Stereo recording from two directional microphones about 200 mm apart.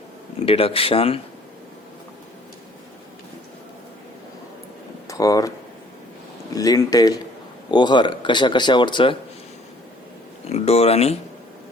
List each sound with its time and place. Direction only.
0.4 s speech: 30° left (ahead or behind)
5.0 s a sound: 15° left (ahead or behind)
6.5 s speech: 20° left (ahead or behind)
10.5 s speech: 30° left (ahead or behind)